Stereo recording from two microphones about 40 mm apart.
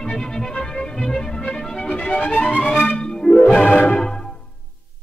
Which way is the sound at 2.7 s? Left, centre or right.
Left.